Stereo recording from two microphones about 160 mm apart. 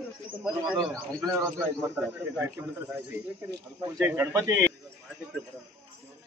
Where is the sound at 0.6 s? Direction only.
5° right (ahead or behind); by 4.6 s 20° right (ahead or behind).